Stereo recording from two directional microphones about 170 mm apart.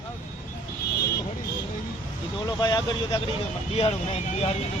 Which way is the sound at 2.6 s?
25° left (ahead or behind).